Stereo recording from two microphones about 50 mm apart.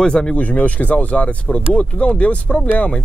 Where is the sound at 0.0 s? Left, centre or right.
Centre.